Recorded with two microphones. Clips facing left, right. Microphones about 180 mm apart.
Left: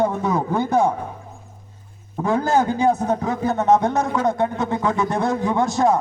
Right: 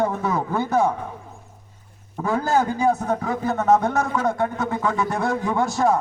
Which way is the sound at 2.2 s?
20° left (ahead or behind).